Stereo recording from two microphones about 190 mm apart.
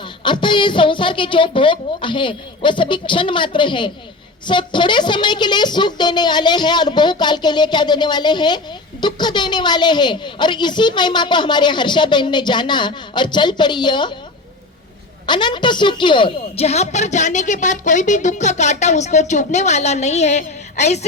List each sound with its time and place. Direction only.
0.2 s a woman's voice: 25° left (ahead or behind)
15.3 s a woman's voice: 25° left (ahead or behind)